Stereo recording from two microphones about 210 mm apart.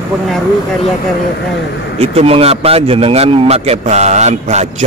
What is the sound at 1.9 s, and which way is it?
Speech, 30° right (ahead or behind).